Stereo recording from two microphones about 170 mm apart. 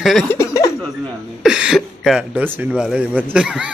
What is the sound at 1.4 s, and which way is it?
Speech, 5° right (ahead or behind).